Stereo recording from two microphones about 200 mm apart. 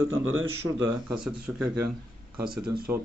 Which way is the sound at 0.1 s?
85° right.